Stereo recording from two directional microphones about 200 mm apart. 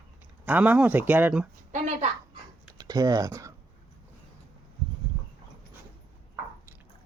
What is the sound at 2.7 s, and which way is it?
Speech, 20° right (ahead or behind).